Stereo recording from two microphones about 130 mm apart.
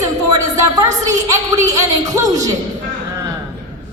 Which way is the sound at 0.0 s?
30° right (ahead or behind).